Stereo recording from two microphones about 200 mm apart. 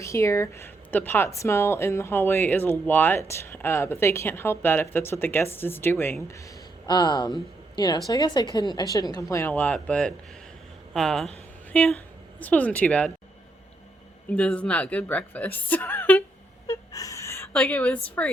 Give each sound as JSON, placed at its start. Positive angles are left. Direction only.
{"t": 0.0, "sound": "a woman's voice", "side_deg": 15}
{"t": 6.8, "sound": "a woman's voice", "side_deg": 20}
{"t": 14.3, "sound": "a woman's voice", "side_deg": 5}
{"t": 16.6, "sound": "a sound", "side_deg": 15}